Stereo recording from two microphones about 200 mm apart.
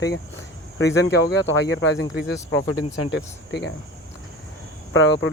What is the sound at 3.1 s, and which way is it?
Speech, 60° left (ahead or behind).